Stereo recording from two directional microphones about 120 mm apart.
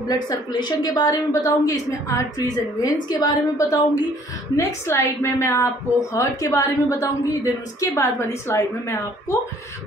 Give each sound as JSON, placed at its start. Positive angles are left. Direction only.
{"t": 0.1, "sound": "a woman's voice", "side_deg": 35}